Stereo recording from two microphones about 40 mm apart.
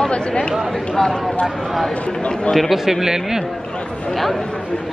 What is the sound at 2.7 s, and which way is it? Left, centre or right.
Speech, centre.